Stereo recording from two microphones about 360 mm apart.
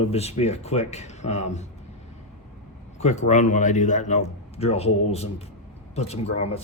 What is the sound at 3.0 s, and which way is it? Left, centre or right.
A man's voice, centre.